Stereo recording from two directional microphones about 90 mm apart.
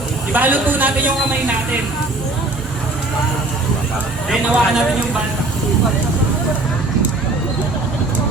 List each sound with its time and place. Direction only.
0.3 s speech: 20° right (ahead or behind)
4.3 s a man's voice: centre (ahead or behind)